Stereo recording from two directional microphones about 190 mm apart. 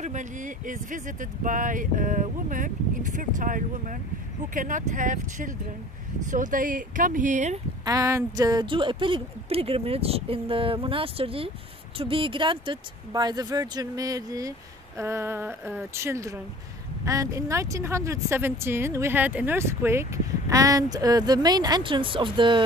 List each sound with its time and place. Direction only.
0.0 s speech: 40° right (ahead or behind)
7.8 s speech: 15° right (ahead or behind)